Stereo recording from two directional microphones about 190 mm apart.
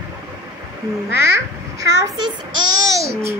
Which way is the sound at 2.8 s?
15° right (ahead or behind).